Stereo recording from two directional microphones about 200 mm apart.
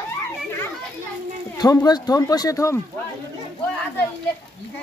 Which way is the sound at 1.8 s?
20° left (ahead or behind).